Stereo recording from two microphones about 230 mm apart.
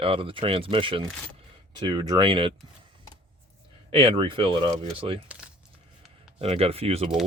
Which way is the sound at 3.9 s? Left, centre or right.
Right.